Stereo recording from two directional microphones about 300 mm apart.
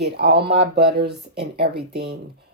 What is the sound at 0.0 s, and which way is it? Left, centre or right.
Speech, right.